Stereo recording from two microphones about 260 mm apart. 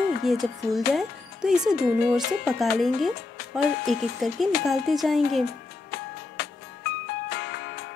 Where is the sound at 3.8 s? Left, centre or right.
Centre.